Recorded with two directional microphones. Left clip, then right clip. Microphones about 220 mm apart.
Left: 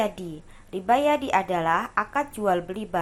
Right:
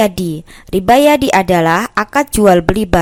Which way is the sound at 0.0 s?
45° right (ahead or behind).